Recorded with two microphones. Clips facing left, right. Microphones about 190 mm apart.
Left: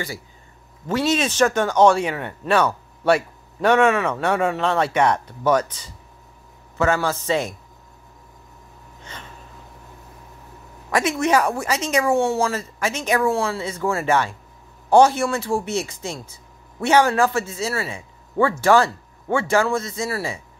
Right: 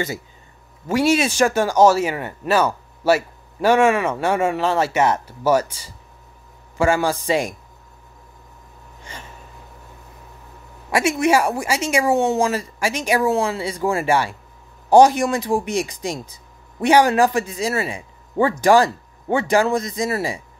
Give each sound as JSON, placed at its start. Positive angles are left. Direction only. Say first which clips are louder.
{"t": 0.8, "sound": "speech", "louder": "right 3 dB", "side_deg": -10}
{"t": 9.0, "sound": "gasp", "louder": "right 1 dB", "side_deg": -10}
{"t": 10.9, "sound": "speech", "louder": "right 2 dB", "side_deg": -10}